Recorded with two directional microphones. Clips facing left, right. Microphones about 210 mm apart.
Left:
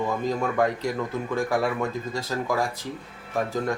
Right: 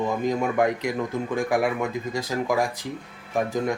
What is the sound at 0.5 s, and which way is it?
Speech, 15° right (ahead or behind).